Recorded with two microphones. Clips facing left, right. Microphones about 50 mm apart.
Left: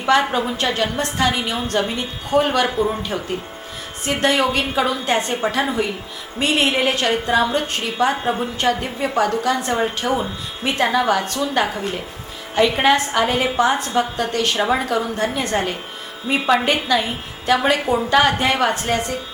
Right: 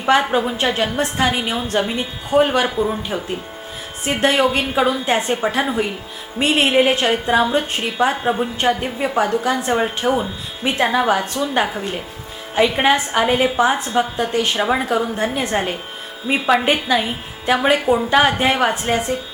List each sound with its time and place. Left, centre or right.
0.0 s a woman's voice: centre
1.8 s a woman's voice: centre
2.3 s a woman's voice: centre
2.6 s a woman's voice: centre
4.0 s a woman's voice: centre
8.1 s a woman's voice: centre
8.6 s a woman's voice: right
17.8 s a woman's voice: centre
18.2 s a woman's voice: centre